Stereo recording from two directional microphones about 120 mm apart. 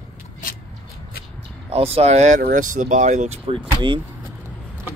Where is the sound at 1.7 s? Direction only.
55° right (ahead or behind); by 3.3 s 75° right (ahead or behind).